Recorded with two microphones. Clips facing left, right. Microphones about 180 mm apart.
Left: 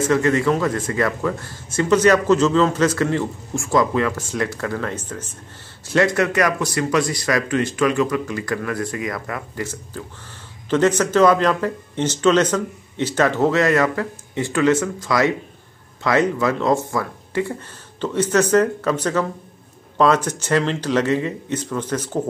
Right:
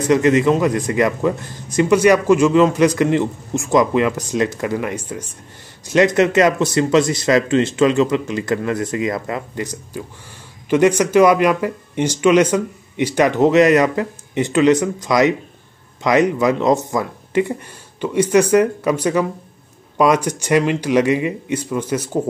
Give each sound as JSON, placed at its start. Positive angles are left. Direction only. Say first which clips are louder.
{"t": 0.0, "sound": "a man's voice", "louder": "right 4 dB", "side_deg": -20}